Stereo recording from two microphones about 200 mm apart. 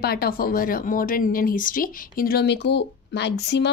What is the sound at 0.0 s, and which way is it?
Speech, 50° left (ahead or behind).